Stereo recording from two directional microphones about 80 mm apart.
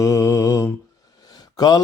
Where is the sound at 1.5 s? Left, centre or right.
Left.